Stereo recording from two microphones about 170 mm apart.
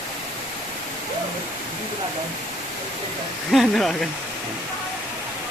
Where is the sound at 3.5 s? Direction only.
Centre (ahead or behind).